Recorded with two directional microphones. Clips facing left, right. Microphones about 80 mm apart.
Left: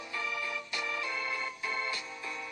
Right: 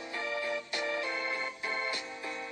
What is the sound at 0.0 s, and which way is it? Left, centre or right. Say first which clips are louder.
Music: right 2 dB; right.